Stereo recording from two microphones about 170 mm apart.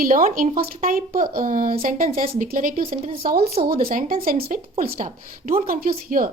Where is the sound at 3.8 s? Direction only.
55° right (ahead or behind).